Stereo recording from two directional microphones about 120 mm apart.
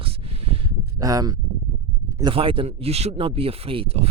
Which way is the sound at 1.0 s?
30° right (ahead or behind).